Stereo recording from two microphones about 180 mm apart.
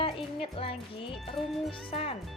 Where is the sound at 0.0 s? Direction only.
30° left (ahead or behind).